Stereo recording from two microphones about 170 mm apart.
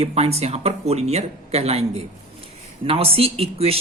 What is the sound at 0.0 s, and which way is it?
Speech, 35° right (ahead or behind).